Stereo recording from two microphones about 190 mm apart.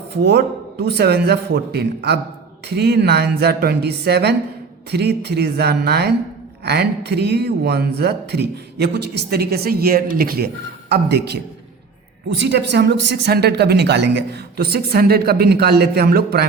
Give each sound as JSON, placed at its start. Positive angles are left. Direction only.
{"t": 0.3, "sound": "speech", "side_deg": -60}